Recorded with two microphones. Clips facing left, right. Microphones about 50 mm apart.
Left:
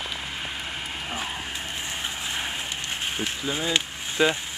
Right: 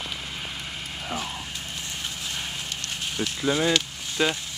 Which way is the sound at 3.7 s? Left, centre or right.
Centre.